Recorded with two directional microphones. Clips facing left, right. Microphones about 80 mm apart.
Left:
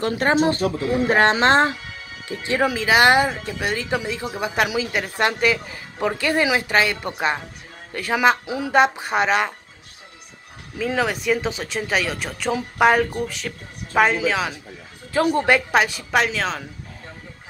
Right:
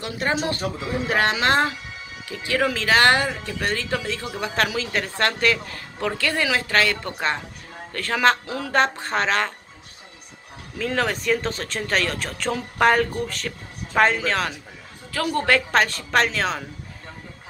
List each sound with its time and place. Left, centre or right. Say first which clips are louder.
0.0 s speech: left 6 dB; left
2.7 s speech: left 3 dB; centre
10.8 s speech: left 2 dB; centre
15.1 s speech: left 3 dB; left; by 16.6 s centre